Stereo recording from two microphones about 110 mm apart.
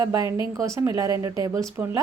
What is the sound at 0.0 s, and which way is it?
A woman's voice, 30° right (ahead or behind).